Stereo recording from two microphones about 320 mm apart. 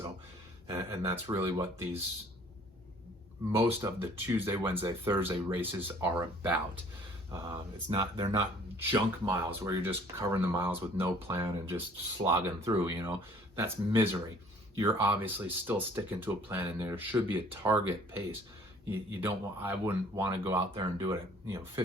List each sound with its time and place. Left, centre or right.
0.9 s speech: centre
3.5 s speech: centre
19.2 s speech: centre